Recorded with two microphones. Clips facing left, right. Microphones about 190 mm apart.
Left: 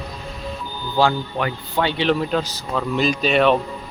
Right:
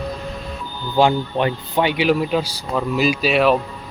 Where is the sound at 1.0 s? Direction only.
20° right (ahead or behind); by 3.6 s 5° right (ahead or behind).